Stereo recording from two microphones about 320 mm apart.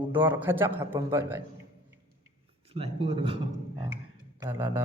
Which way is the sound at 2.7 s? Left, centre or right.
Centre.